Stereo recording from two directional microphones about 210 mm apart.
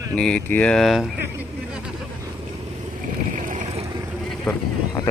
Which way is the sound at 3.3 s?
35° right (ahead or behind).